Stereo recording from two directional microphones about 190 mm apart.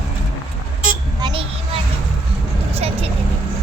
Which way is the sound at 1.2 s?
25° right (ahead or behind).